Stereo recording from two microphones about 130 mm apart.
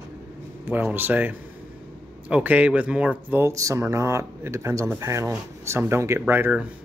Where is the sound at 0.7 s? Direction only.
15° right (ahead or behind).